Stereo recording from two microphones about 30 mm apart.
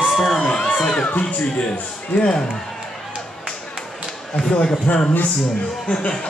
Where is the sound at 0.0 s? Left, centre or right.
Centre.